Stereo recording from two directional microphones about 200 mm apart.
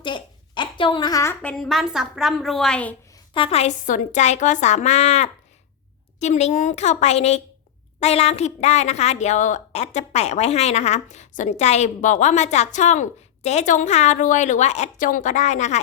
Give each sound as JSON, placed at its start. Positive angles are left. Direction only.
{"t": 0.0, "sound": "a woman's voice", "side_deg": 25}
{"t": 3.3, "sound": "a woman's voice", "side_deg": 30}